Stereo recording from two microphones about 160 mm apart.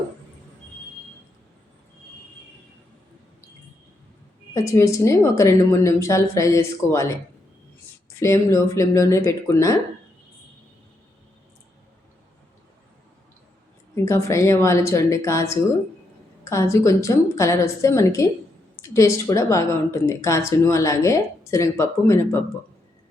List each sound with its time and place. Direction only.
4.5 s a woman's voice: 20° left (ahead or behind)
8.2 s a woman's voice: 20° left (ahead or behind)
13.9 s a woman's voice: 20° left (ahead or behind)